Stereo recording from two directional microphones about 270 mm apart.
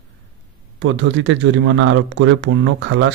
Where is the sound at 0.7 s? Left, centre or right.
Right.